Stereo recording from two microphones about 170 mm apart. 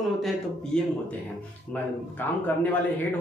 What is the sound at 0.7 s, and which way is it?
Speech, 5° left (ahead or behind).